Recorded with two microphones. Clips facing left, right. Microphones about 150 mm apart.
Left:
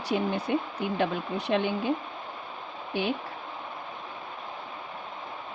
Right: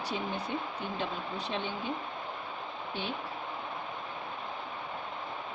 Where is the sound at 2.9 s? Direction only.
85° left.